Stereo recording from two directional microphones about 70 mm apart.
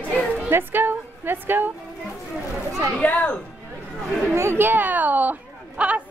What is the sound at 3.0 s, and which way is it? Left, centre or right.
Speech, left.